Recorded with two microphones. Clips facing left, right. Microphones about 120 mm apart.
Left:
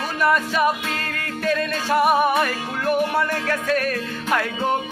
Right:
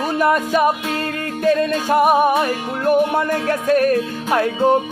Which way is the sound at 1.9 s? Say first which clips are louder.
Right 3 dB; 40° right (ahead or behind).